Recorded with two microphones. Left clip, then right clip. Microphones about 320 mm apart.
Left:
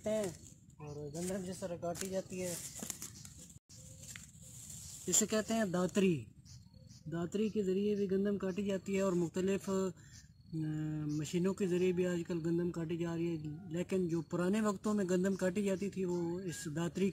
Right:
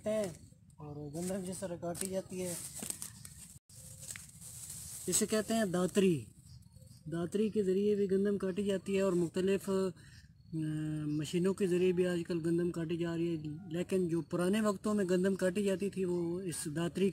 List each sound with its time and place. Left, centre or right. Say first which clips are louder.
0.0 s a sound: right 1 dB; centre
0.8 s speech: right 1 dB; centre
5.0 s speech: right 1 dB; centre